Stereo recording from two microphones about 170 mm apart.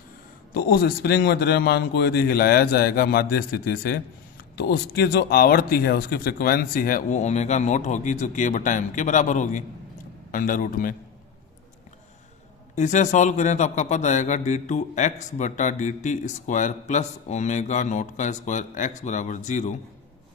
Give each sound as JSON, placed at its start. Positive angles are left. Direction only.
{"t": 0.5, "sound": "a man's voice", "side_deg": 65}
{"t": 12.7, "sound": "a man's voice", "side_deg": 45}